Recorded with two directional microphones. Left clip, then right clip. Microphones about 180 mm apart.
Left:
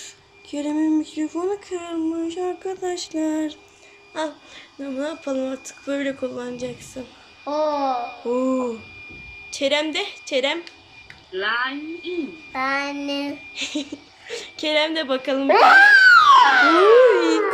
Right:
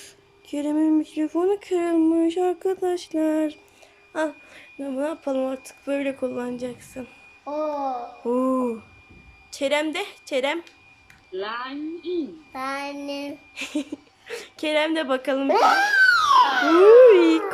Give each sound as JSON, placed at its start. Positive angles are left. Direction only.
{"t": 0.5, "sound": "speech", "side_deg": -5}
{"t": 7.8, "sound": "speech", "side_deg": 5}
{"t": 8.2, "sound": "speech", "side_deg": -10}
{"t": 11.3, "sound": "a child's voice", "side_deg": -20}